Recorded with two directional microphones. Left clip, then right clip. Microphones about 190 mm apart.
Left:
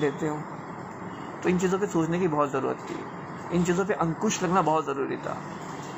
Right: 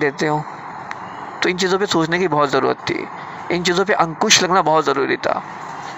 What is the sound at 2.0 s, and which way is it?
Speech, 90° right.